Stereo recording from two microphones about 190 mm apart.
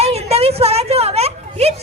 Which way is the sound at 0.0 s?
35° right (ahead or behind).